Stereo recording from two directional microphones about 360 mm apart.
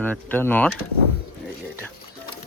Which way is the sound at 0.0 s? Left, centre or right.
Centre.